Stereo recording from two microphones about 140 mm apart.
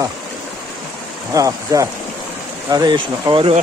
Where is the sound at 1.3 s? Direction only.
25° right (ahead or behind).